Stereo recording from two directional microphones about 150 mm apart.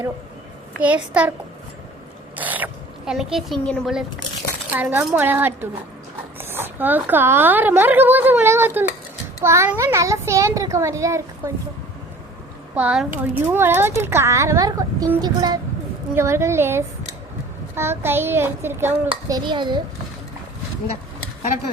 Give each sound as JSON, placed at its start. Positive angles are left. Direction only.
{"t": 0.8, "sound": "a woman's voice", "side_deg": -10}
{"t": 2.3, "sound": "a woman's voice", "side_deg": -10}
{"t": 4.7, "sound": "a woman's voice", "side_deg": -10}
{"t": 12.7, "sound": "a woman's voice", "side_deg": -5}
{"t": 19.5, "sound": "a child's voice", "side_deg": -30}